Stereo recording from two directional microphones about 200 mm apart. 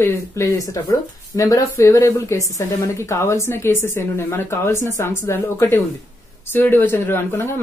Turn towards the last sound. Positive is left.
turn(degrees=10)  # may be behind; listen again after turning